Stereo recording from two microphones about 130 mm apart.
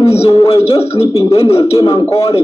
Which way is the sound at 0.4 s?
50° left (ahead or behind).